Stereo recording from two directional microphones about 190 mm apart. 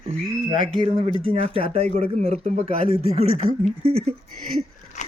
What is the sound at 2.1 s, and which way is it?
Speech, 35° right (ahead or behind).